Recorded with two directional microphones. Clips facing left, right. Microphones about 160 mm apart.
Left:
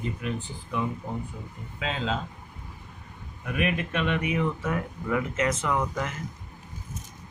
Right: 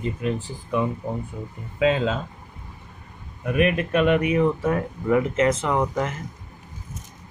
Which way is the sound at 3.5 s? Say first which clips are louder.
Right 7 dB; 45° right (ahead or behind).